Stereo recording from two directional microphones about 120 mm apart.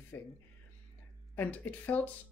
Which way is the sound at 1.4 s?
15° left (ahead or behind).